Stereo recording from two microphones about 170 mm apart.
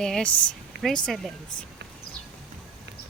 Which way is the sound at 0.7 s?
80° right.